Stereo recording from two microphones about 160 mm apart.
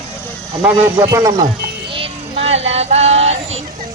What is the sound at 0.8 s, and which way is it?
Speech, 15° right (ahead or behind).